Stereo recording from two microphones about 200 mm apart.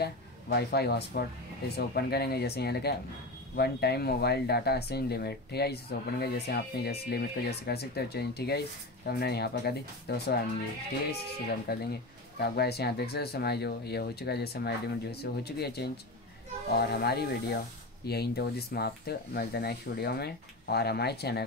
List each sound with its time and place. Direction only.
0.0 s speech: 55° left (ahead or behind)
11.7 s speech: 50° left (ahead or behind)